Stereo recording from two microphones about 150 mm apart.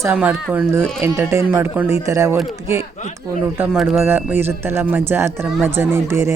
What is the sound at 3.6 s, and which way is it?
Speech, 5° right (ahead or behind).